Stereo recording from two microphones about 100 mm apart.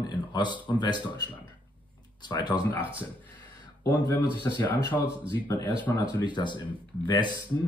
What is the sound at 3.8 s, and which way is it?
Speech, 40° left (ahead or behind).